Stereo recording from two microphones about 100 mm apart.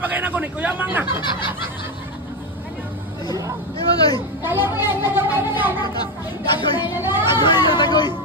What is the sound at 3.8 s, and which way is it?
Speech, 40° left (ahead or behind).